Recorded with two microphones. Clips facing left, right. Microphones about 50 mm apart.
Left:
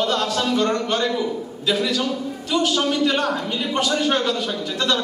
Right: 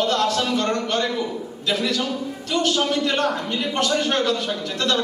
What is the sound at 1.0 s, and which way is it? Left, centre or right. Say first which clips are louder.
Speech: left 2 dB; centre.